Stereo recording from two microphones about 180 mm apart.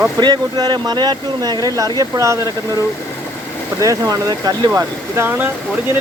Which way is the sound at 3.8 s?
20° right (ahead or behind).